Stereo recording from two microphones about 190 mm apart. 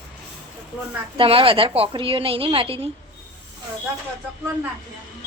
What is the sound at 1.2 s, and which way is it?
A woman's voice, 30° right (ahead or behind).